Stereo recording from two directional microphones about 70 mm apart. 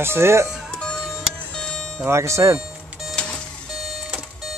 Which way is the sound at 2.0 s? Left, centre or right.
Right.